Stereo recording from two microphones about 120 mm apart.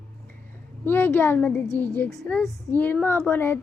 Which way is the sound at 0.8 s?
20° left (ahead or behind).